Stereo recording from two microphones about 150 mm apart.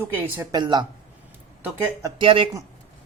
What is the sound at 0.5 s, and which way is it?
Speech, 30° right (ahead or behind).